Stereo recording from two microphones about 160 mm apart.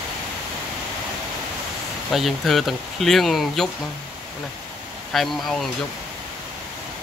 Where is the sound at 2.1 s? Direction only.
Centre (ahead or behind).